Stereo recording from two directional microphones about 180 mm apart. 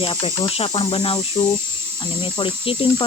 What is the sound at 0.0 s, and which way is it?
Snake, 30° left (ahead or behind).